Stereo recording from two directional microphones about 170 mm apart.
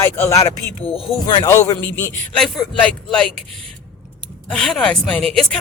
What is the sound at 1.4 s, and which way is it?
A man's voice, 20° left (ahead or behind).